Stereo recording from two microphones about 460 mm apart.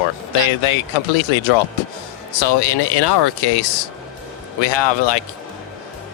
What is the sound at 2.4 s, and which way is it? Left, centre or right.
Speech, left.